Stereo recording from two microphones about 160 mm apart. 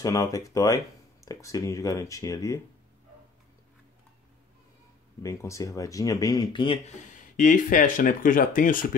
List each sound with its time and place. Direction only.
0.0 s speech: 20° left (ahead or behind)
5.2 s speech: 20° left (ahead or behind)
7.2 s speech: 55° left (ahead or behind)